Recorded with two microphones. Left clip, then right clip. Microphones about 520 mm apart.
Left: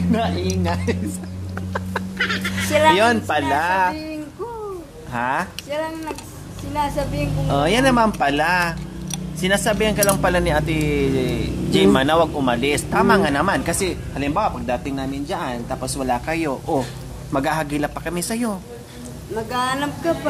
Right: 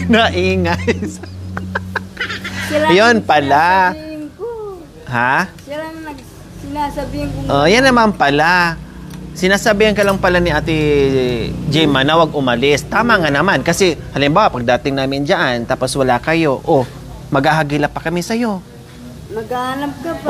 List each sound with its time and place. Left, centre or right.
0.1 s speech: right
1.5 s chicken: right
2.1 s fowl: centre
2.9 s a man's voice: right
5.1 s a man's voice: right
5.7 s a sound: left
7.4 s a man's voice: right
19.5 s speech: left